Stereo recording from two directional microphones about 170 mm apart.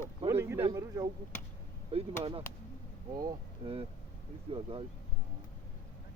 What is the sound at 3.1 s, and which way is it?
Speech, 25° right (ahead or behind).